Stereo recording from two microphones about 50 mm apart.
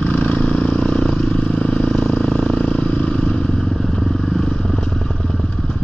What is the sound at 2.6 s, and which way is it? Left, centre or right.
Vehicle, left.